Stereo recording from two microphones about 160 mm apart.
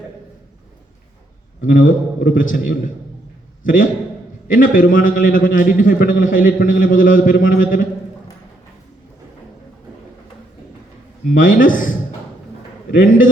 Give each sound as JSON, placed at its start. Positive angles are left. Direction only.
{"t": 1.6, "sound": "a man's voice", "side_deg": 60}
{"t": 4.4, "sound": "a man's voice", "side_deg": 60}
{"t": 11.3, "sound": "a man's voice", "side_deg": 60}
{"t": 12.9, "sound": "a man's voice", "side_deg": 60}